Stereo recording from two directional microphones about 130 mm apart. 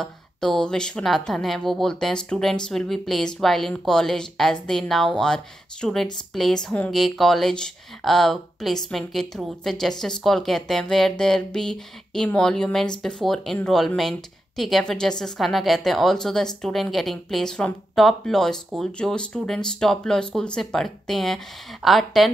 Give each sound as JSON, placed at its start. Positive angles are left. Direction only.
{"t": 0.0, "sound": "speech", "side_deg": 5}